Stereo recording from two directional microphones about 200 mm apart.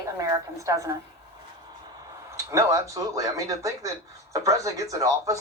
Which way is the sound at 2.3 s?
15° right (ahead or behind).